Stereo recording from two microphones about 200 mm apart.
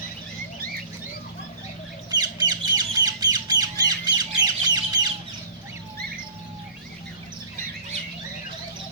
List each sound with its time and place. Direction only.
2.0 s squawk: 20° right (ahead or behind)